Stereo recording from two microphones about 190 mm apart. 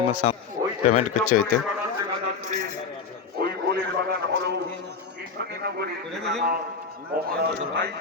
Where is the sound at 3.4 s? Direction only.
55° right (ahead or behind).